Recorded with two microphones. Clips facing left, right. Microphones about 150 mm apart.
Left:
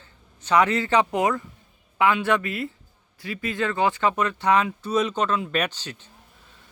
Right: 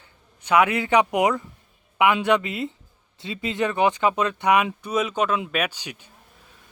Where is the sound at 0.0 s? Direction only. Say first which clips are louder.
Left 1 dB; 10° right (ahead or behind).